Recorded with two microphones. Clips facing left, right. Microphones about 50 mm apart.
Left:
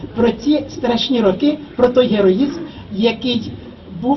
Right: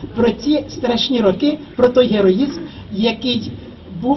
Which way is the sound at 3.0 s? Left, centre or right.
Centre.